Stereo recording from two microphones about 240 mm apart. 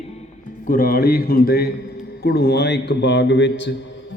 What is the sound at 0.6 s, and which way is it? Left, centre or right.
A man's voice, left.